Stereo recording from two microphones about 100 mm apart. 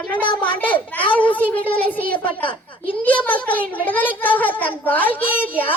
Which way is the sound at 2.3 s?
60° left (ahead or behind).